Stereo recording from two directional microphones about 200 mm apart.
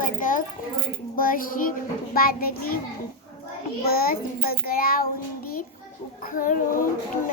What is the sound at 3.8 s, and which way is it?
Child singing, 50° left (ahead or behind).